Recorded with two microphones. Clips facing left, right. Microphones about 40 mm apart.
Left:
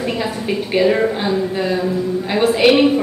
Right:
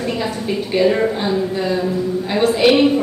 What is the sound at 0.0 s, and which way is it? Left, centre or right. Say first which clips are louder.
A woman's voice: even; centre.